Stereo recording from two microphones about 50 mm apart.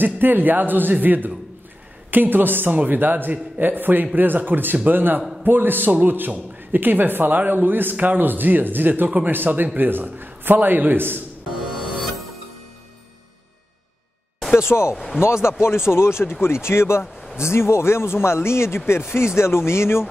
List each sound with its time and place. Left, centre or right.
0.0 s a man's voice: right
11.6 s music: centre
14.7 s speech: left